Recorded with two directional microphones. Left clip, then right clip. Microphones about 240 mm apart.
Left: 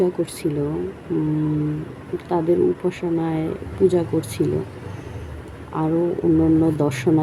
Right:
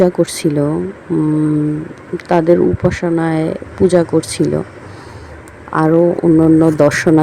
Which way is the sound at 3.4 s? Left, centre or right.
Right.